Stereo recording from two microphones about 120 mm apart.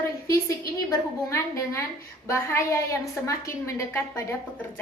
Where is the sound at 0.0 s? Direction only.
25° left (ahead or behind).